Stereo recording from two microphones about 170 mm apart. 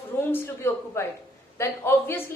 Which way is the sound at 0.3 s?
15° left (ahead or behind).